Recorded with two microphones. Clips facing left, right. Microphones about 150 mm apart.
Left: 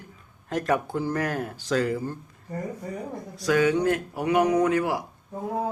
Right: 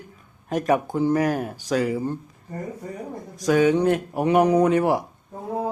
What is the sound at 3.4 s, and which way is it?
Speech, 20° right (ahead or behind).